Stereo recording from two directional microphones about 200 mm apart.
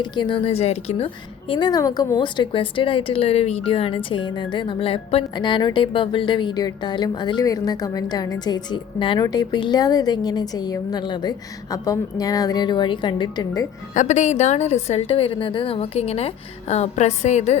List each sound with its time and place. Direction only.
0.0 s a woman's voice: 25° left (ahead or behind)
13.9 s a woman's voice: 35° left (ahead or behind)